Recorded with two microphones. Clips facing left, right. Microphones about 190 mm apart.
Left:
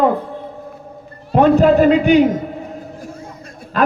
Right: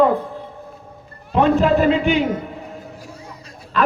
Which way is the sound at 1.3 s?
45° left (ahead or behind).